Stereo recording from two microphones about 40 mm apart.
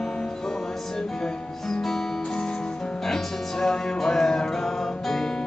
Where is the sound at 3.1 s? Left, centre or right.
Centre.